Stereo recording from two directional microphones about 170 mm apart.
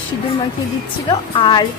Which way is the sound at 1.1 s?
25° left (ahead or behind).